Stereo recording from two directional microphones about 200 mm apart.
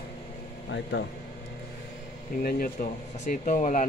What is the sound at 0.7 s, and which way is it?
Speech, 60° left (ahead or behind).